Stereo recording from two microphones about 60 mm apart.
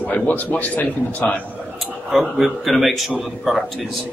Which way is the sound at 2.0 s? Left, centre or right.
Centre.